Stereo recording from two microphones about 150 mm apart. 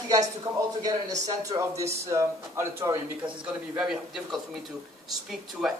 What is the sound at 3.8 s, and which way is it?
Speech, 5° right (ahead or behind).